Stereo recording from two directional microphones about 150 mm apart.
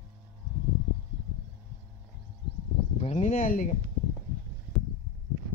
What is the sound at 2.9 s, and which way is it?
Speech, 50° left (ahead or behind).